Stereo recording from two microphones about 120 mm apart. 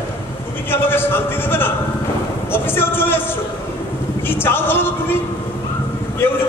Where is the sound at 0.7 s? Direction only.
20° left (ahead or behind).